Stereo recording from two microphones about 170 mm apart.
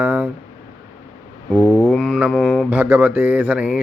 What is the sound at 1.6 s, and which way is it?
Mantra, 15° left (ahead or behind).